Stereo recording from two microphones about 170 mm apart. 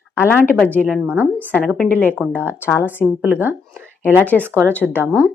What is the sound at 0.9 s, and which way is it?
Speech, 5° right (ahead or behind).